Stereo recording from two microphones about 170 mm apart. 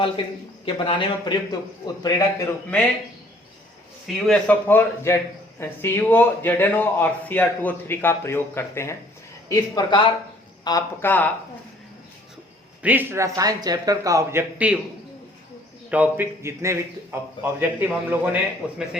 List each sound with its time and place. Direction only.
0.6 s a man's voice: 30° left (ahead or behind)
4.0 s a man's voice: 5° left (ahead or behind)
12.8 s a man's voice: 10° right (ahead or behind)
15.9 s a man's voice: 10° right (ahead or behind)